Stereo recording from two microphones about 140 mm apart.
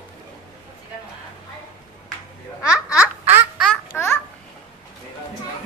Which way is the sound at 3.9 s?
15° left (ahead or behind).